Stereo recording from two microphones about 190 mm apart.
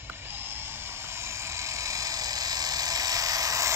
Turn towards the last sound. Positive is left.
turn(degrees=-20)  # may be behind; listen again after turning